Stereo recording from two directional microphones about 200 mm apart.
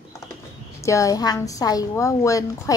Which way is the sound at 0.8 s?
15° left (ahead or behind).